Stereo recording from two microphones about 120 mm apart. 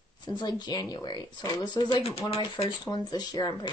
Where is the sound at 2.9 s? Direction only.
35° left (ahead or behind).